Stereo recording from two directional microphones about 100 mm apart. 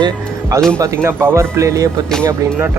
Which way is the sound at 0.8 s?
25° right (ahead or behind).